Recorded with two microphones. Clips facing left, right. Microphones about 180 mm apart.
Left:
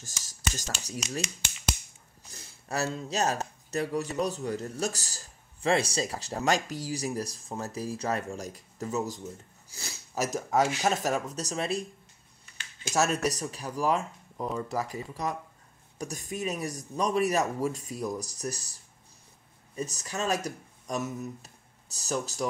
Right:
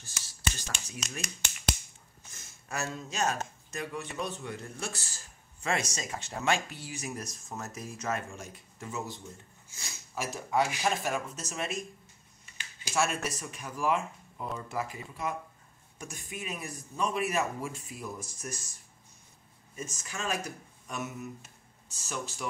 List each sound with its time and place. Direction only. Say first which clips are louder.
0.0 s a sound: left 1 dB; 45° left (ahead or behind)
2.2 s speech: left 6 dB; 35° left (ahead or behind)
12.9 s speech: left 4 dB; 40° left (ahead or behind)
19.7 s speech: left 6 dB; 35° left (ahead or behind)